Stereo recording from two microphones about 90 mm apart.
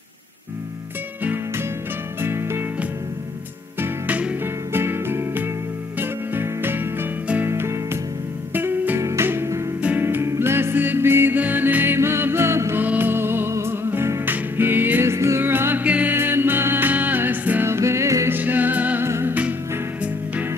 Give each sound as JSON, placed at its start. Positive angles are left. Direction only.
{"t": 1.2, "sound": "music", "side_deg": -20}
{"t": 3.8, "sound": "music", "side_deg": -15}
{"t": 4.7, "sound": "music", "side_deg": -25}
{"t": 9.8, "sound": "music", "side_deg": -15}
{"t": 10.0, "sound": "music", "side_deg": -30}
{"t": 18.3, "sound": "music", "side_deg": -20}
{"t": 19.0, "sound": "music", "side_deg": -30}